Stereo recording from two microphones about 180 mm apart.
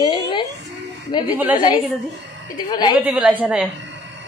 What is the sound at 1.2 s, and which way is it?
Speech, 10° right (ahead or behind).